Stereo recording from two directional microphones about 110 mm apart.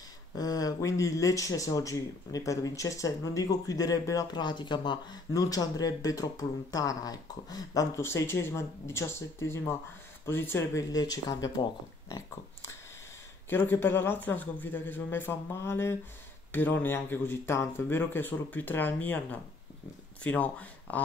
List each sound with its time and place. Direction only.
0.4 s speech: 35° left (ahead or behind)
8.0 s a man's voice: 25° left (ahead or behind)
10.2 s speech: 20° left (ahead or behind)
13.5 s a man's voice: 20° left (ahead or behind)